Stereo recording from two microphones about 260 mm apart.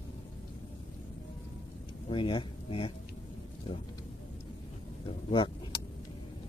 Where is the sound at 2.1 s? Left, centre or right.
Centre.